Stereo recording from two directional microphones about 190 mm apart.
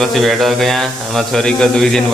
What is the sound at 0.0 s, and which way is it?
Speech, centre (ahead or behind).